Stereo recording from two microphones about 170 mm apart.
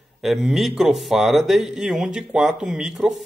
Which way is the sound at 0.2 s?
Centre (ahead or behind).